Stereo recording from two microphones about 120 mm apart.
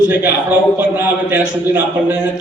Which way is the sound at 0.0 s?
15° right (ahead or behind).